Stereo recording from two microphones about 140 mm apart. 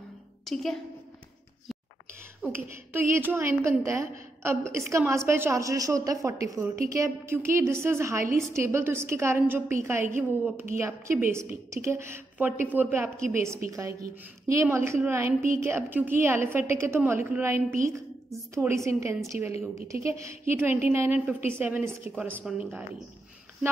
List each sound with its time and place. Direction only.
0.5 s a woman's voice: centre (ahead or behind)
2.4 s a woman's voice: 15° right (ahead or behind)